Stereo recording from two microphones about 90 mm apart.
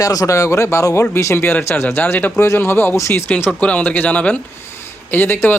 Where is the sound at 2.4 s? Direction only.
30° left (ahead or behind).